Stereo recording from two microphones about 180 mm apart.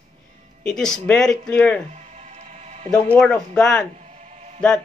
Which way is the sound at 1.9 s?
40° right (ahead or behind).